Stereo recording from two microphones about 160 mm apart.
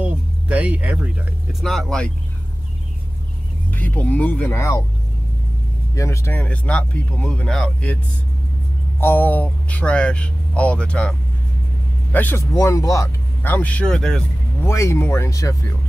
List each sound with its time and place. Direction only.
0.0 s speech: 10° right (ahead or behind)
3.7 s speech: 10° left (ahead or behind)
5.9 s speech: 20° left (ahead or behind)
9.0 s speech: 10° left (ahead or behind)
14.6 s speech: 15° left (ahead or behind)